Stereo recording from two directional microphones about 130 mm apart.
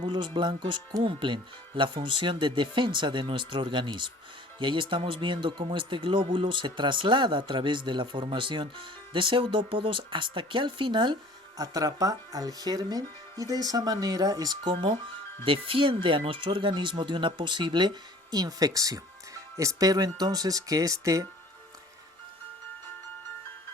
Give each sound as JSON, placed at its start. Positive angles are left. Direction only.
{"t": 0.0, "sound": "speech", "side_deg": -35}